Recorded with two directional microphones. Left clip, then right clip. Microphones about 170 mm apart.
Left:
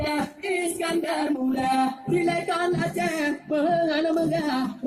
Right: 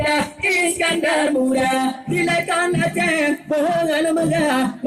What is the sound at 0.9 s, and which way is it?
Music, 50° right (ahead or behind).